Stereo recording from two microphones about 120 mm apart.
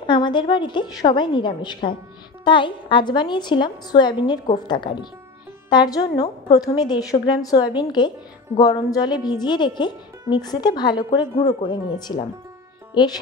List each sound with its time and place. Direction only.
0.0 s a woman's voice: 40° left (ahead or behind)